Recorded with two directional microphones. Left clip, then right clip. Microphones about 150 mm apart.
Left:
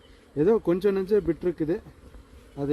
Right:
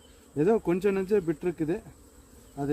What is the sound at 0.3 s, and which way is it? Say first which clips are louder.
Speech: left 3 dB; 20° right (ahead or behind).